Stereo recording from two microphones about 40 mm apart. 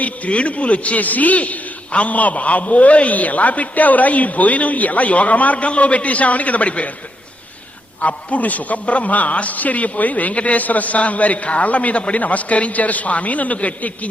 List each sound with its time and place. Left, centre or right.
0.0 s a man's voice: left
8.0 s a man's voice: left